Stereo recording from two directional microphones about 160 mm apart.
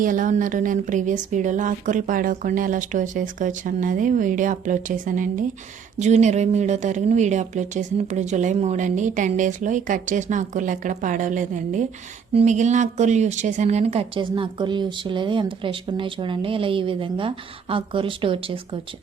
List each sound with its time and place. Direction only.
0.0 s speech: 55° right (ahead or behind)
6.0 s speech: 45° right (ahead or behind)